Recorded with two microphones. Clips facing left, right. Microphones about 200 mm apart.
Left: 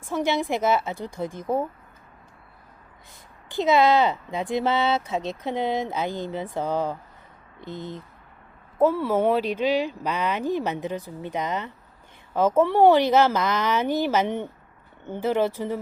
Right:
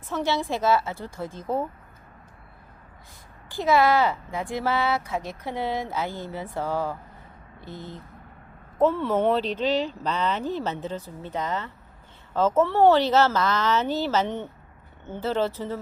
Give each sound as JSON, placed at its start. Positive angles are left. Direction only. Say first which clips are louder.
{"t": 0.0, "sound": "speech", "louder": "left 2 dB", "side_deg": 10}
{"t": 3.5, "sound": "speech", "louder": "left 2 dB", "side_deg": 20}